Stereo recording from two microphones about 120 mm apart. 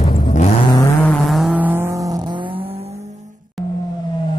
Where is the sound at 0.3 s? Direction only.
75° left (ahead or behind).